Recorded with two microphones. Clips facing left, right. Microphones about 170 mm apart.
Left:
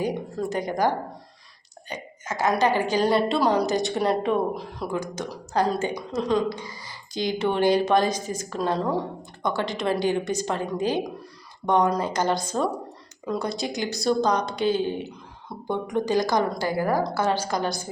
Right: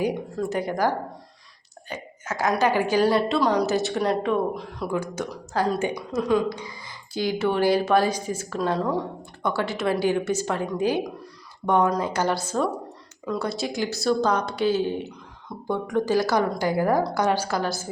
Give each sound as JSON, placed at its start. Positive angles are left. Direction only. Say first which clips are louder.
{"t": 0.3, "sound": "speech", "louder": "left 2 dB", "side_deg": -5}
{"t": 1.9, "sound": "a sound", "louder": "right 1 dB", "side_deg": -10}
{"t": 2.6, "sound": "speech", "louder": "right 3 dB", "side_deg": -10}
{"t": 4.9, "sound": "speech", "louder": "right 2 dB", "side_deg": -10}
{"t": 15.4, "sound": "speech", "louder": "right 1 dB", "side_deg": 20}
{"t": 16.2, "sound": "speech", "louder": "right 1 dB", "side_deg": -10}